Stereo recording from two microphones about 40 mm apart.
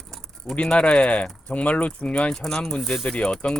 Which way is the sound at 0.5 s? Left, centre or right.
Left.